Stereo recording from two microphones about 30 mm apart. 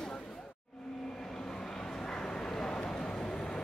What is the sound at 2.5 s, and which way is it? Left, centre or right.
Vehicle, left.